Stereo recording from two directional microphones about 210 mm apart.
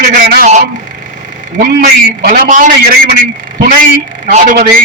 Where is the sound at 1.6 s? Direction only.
45° right (ahead or behind).